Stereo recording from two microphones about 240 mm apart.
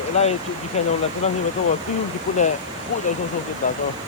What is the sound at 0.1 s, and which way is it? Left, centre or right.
Speech, left.